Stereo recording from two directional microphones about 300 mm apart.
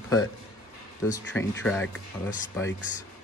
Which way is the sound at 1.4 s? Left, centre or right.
Centre.